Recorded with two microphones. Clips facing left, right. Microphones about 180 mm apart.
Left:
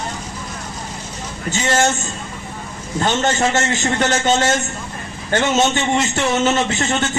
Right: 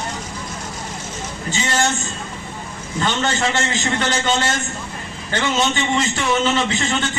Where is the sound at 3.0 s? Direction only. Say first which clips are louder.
Left 3 dB; 45° left (ahead or behind).